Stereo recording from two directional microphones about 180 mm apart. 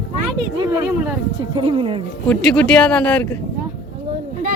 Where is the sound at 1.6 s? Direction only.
30° right (ahead or behind).